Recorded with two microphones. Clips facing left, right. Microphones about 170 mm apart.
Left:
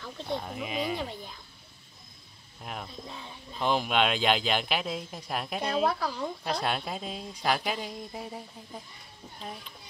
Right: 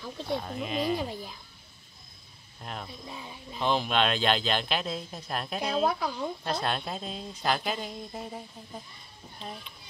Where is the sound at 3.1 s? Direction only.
10° right (ahead or behind).